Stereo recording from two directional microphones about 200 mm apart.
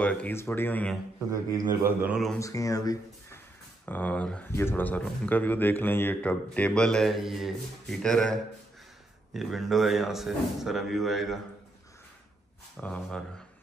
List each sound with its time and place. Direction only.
0.0 s speech: 5° left (ahead or behind)
1.3 s a man's voice: 15° right (ahead or behind)
2.3 s speech: 15° left (ahead or behind)
3.8 s speech: 5° left (ahead or behind)
12.7 s speech: 5° left (ahead or behind)